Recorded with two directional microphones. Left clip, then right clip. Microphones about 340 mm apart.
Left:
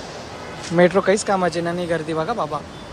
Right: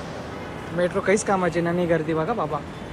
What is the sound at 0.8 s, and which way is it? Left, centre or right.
Speech, centre.